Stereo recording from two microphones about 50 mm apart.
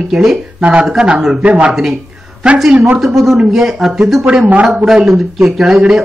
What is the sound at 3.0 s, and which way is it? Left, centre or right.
Speech, centre.